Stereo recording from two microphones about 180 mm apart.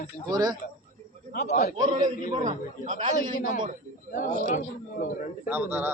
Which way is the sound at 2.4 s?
45° right (ahead or behind).